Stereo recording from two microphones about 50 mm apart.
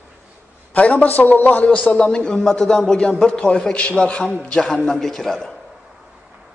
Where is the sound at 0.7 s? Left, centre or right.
Left.